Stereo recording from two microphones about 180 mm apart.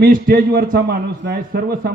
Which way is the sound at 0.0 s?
55° right (ahead or behind).